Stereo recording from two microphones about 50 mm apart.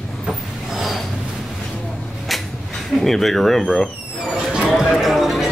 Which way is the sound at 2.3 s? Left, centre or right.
Centre.